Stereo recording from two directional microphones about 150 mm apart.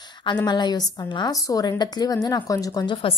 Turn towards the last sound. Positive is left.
turn(degrees=35)  # may be behind; listen again after turning